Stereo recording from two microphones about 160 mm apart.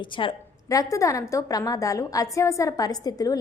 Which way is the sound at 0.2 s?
25° left (ahead or behind).